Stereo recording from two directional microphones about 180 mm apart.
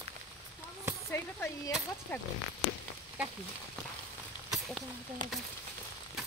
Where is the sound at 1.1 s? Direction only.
15° left (ahead or behind).